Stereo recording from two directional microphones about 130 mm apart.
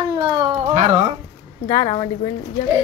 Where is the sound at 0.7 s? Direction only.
55° right (ahead or behind).